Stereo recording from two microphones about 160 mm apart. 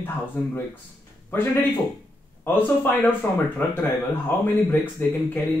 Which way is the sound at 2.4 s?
10° left (ahead or behind).